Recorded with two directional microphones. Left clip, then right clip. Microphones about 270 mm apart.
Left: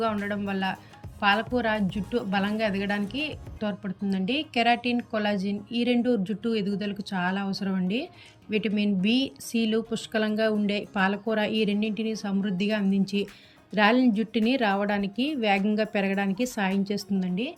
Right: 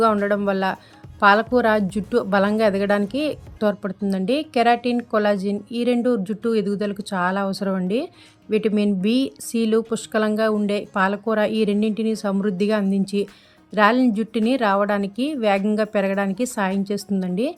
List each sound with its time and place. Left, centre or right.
0.0 s speech: centre